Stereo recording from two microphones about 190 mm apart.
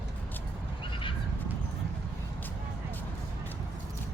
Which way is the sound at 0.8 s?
25° left (ahead or behind).